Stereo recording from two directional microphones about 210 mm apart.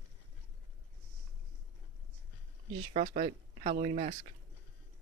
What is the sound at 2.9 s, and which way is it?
Speech, 35° right (ahead or behind).